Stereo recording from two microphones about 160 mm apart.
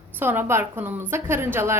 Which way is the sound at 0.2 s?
15° right (ahead or behind).